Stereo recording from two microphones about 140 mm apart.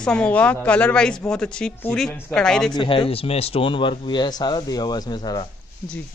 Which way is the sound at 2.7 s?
35° left (ahead or behind).